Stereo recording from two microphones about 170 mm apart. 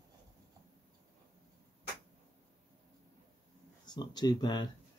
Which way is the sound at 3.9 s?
25° left (ahead or behind).